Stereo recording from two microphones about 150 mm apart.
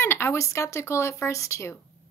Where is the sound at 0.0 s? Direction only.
15° left (ahead or behind).